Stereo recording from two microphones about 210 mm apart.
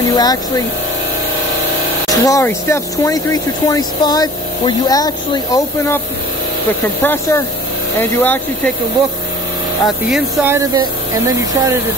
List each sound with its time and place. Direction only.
0.1 s speech: 20° left (ahead or behind)
2.0 s speech: 15° left (ahead or behind)
7.0 s speech: 10° left (ahead or behind)
9.8 s speech: 5° right (ahead or behind)